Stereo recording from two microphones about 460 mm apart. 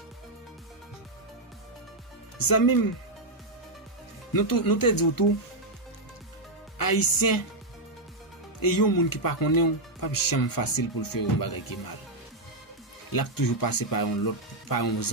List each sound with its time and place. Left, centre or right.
2.3 s speech: left
4.3 s speech: left
6.8 s speech: left
8.5 s speech: left
13.1 s speech: left